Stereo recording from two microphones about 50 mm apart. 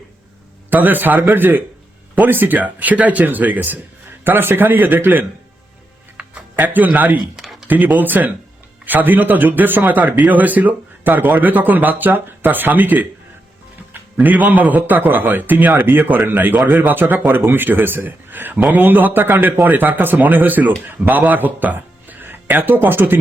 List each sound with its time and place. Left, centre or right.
0.7 s a man's voice: right
4.2 s a man's voice: right
6.6 s a man's voice: right
7.2 s a sound: centre
7.7 s a man's voice: right
14.2 s a man's voice: right